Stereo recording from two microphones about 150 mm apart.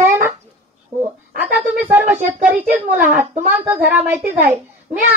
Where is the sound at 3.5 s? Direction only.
10° right (ahead or behind).